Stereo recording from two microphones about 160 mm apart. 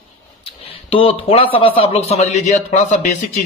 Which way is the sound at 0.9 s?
35° left (ahead or behind).